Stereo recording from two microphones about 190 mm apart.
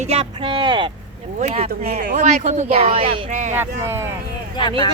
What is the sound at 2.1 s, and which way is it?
Speech, 40° right (ahead or behind).